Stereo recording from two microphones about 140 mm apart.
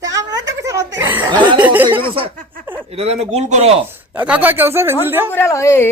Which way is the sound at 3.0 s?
50° right (ahead or behind).